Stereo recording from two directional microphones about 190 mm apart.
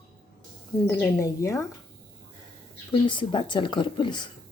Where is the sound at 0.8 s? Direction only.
15° left (ahead or behind).